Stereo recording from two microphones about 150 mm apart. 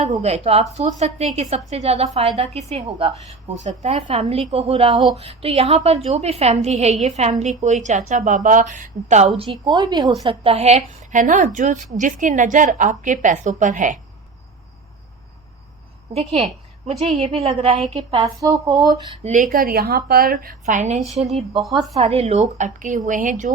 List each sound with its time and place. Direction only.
0.0 s a woman's voice: 45° right (ahead or behind); by 10.2 s 25° right (ahead or behind)
10.2 s a woman's voice: 40° right (ahead or behind); by 14.0 s 60° right (ahead or behind)
17.0 s a woman's voice: 50° right (ahead or behind)
18.3 s speech: 20° right (ahead or behind)
19.2 s a woman's voice: 60° right (ahead or behind)
21.6 s speech: centre (ahead or behind)
21.9 s a woman's voice: 45° right (ahead or behind); by 23.5 s 60° right (ahead or behind)